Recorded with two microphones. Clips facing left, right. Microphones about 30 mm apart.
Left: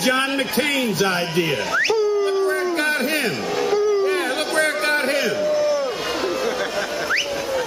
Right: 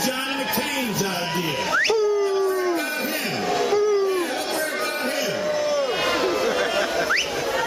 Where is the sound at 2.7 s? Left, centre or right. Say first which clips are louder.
Left 4 dB; left.